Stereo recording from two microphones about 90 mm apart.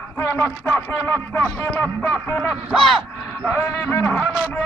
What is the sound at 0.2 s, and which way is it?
Speech, 30° left (ahead or behind).